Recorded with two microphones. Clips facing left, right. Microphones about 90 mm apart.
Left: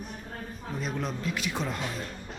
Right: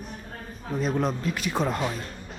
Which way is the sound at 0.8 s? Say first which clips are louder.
Right 6 dB; 40° right (ahead or behind).